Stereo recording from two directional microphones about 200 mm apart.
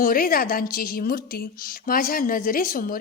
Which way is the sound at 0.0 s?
45° left (ahead or behind).